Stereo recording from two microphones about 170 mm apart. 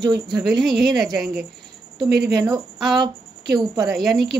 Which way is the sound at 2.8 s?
Centre (ahead or behind).